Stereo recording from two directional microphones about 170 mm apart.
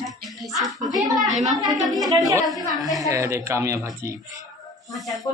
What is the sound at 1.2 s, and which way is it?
Speech, 45° right (ahead or behind).